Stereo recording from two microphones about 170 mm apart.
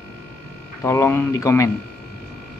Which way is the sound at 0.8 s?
15° left (ahead or behind).